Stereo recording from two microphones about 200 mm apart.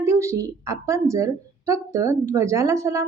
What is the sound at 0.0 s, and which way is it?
A woman's voice, 15° right (ahead or behind).